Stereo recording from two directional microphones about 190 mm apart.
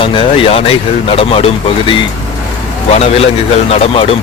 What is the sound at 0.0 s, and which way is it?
Speech, 25° left (ahead or behind).